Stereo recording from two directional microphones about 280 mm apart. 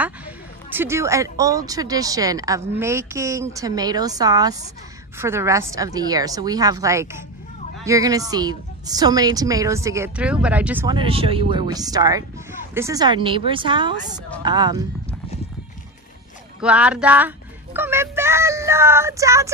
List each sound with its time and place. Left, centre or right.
0.7 s a woman's voice: centre
16.6 s a sound: centre
17.7 s a woman's voice: centre